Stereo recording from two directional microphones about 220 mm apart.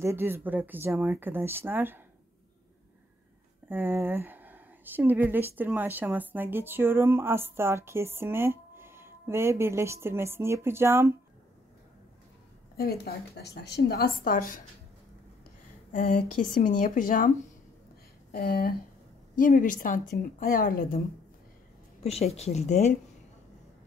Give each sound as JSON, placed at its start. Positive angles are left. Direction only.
{"t": 0.0, "sound": "speech", "side_deg": -10}
{"t": 3.6, "sound": "speech", "side_deg": -10}
{"t": 12.7, "sound": "a woman's voice", "side_deg": 45}
{"t": 15.9, "sound": "speech", "side_deg": 40}
{"t": 18.3, "sound": "a woman's voice", "side_deg": 45}
{"t": 22.0, "sound": "speech", "side_deg": 30}